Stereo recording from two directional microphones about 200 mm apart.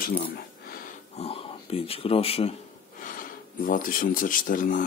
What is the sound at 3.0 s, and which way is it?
Speech, 45° left (ahead or behind).